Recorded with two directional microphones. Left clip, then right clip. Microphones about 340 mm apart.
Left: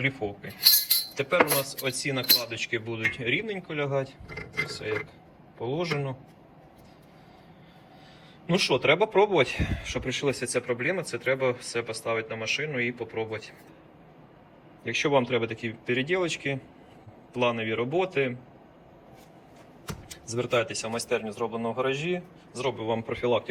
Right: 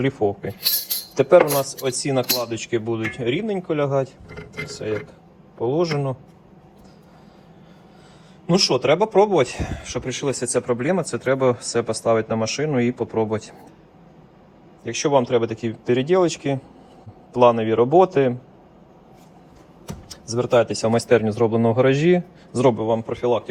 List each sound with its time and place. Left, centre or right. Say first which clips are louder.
0.0 s speech: right 8 dB; centre
8.4 s speech: right 5 dB; centre
14.8 s speech: right 5 dB; centre
20.1 s speech: right 8 dB; centre; by 22.7 s right
22.8 s speech: right 7 dB; centre